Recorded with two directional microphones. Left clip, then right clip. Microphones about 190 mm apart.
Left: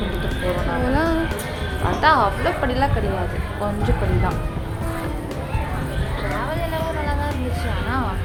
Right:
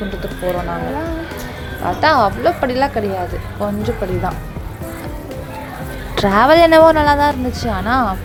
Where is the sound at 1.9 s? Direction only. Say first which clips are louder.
Right 3 dB; 25° right (ahead or behind).